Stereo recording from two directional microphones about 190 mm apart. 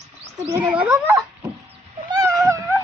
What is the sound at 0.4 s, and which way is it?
Speech, 10° right (ahead or behind).